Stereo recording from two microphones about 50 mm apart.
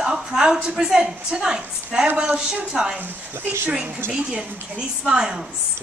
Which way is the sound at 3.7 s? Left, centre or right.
Right.